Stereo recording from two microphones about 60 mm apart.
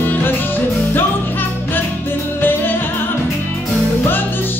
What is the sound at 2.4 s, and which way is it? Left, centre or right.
Music, left.